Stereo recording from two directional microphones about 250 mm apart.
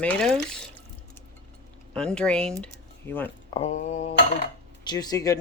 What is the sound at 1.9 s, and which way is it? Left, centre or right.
Speech, centre.